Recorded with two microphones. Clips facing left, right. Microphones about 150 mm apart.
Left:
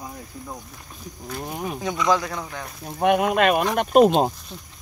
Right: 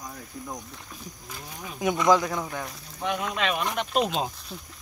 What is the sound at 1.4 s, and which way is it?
Speech, 60° left (ahead or behind).